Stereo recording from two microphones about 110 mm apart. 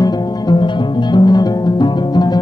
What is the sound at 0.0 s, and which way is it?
Music, 40° left (ahead or behind).